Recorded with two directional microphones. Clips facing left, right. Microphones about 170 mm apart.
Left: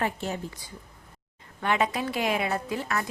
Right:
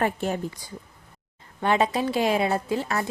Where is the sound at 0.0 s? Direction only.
50° right (ahead or behind).